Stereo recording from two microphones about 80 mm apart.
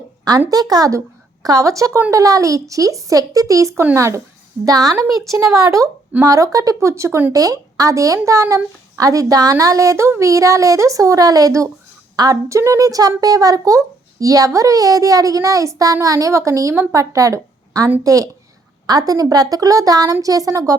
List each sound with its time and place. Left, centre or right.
0.3 s a woman's voice: right
4.6 s a woman's voice: right